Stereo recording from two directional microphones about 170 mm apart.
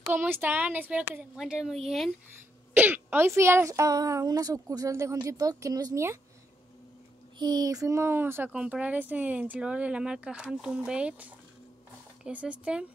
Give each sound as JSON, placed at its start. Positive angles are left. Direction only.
{"t": 0.1, "sound": "a woman's voice", "side_deg": -10}
{"t": 7.3, "sound": "speech", "side_deg": -25}